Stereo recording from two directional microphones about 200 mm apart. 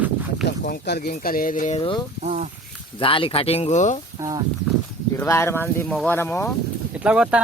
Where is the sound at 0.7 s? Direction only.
55° left (ahead or behind).